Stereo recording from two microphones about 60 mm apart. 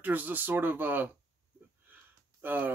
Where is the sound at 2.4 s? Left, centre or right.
Right.